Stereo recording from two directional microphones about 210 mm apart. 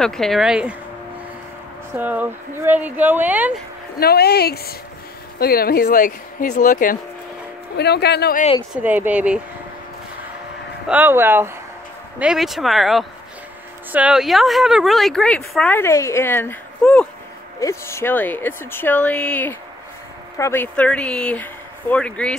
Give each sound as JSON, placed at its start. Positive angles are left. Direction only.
{"t": 0.0, "sound": "speech", "side_deg": 0}
{"t": 2.0, "sound": "speech", "side_deg": -10}
{"t": 4.0, "sound": "speech", "side_deg": 50}
{"t": 8.7, "sound": "speech", "side_deg": -10}
{"t": 10.9, "sound": "speech", "side_deg": -10}